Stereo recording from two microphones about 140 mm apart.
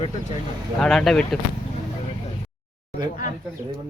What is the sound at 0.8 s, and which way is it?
Speech, 5° left (ahead or behind).